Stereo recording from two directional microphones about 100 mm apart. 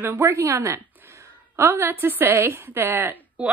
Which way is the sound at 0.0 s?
20° right (ahead or behind).